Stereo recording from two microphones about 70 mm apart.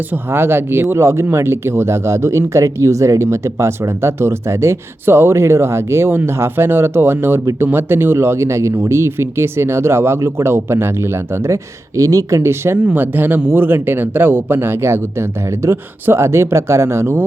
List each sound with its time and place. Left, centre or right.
0.1 s speech: right
12.8 s speech: right